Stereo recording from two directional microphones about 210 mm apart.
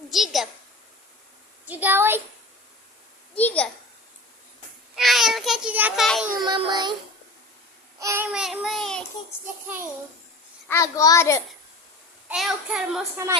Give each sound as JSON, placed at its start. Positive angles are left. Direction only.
{"t": 0.1, "sound": "child singing", "side_deg": 0}
{"t": 1.6, "sound": "a child's voice", "side_deg": -10}
{"t": 3.3, "sound": "a child's voice", "side_deg": 5}
{"t": 4.9, "sound": "child singing", "side_deg": 0}
{"t": 6.4, "sound": "child singing", "side_deg": -20}
{"t": 7.9, "sound": "child singing", "side_deg": -15}
{"t": 10.7, "sound": "a child's voice", "side_deg": 15}
{"t": 12.3, "sound": "child singing", "side_deg": 0}
{"t": 13.2, "sound": "a child's voice", "side_deg": -15}